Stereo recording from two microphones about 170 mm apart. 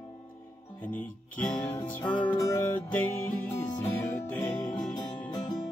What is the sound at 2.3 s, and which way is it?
Music, 10° left (ahead or behind).